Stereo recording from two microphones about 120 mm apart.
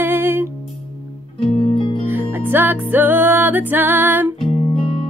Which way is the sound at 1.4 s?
50° left (ahead or behind).